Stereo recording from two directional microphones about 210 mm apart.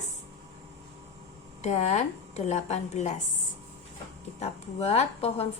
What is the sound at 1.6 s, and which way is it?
A woman's voice, 30° left (ahead or behind).